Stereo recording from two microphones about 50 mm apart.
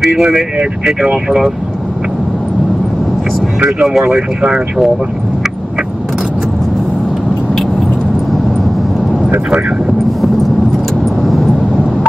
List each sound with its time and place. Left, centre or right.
0.2 s speech: centre
3.8 s speech: centre